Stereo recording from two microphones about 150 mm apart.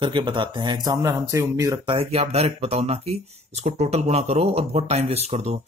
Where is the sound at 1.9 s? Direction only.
40° right (ahead or behind).